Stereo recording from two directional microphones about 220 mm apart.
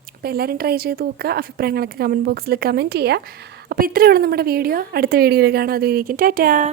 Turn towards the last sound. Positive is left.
turn(degrees=-40)  # may be behind; listen again after turning